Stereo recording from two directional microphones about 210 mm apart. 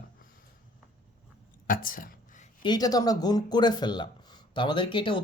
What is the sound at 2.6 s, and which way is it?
Speech, 20° left (ahead or behind).